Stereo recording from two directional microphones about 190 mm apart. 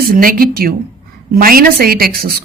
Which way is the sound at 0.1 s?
50° right (ahead or behind).